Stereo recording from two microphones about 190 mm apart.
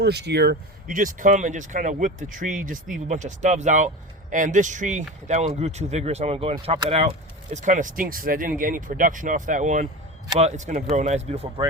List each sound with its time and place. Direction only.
0.0 s speech: 60° right (ahead or behind); by 11.6 s 35° right (ahead or behind)